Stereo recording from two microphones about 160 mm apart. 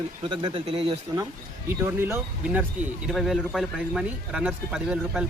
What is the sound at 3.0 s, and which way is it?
Speech, centre (ahead or behind).